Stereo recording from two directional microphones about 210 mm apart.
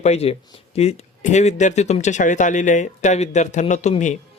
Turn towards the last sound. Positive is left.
turn(degrees=35)  # may be behind; listen again after turning